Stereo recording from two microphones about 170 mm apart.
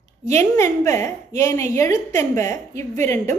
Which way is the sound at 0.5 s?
15° left (ahead or behind).